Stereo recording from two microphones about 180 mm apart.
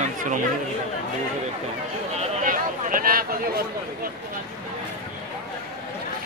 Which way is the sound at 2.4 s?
50° right (ahead or behind).